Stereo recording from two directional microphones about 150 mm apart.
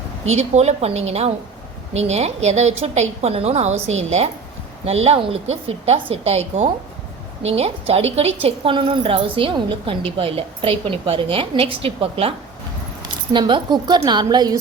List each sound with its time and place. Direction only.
0.3 s a woman's voice: 45° right (ahead or behind)
13.3 s a woman's voice: 30° right (ahead or behind)